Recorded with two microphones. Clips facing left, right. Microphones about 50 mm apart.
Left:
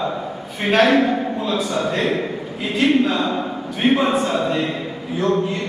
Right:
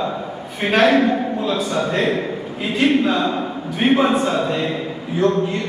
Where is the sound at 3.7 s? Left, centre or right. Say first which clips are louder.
Right 1 dB; centre.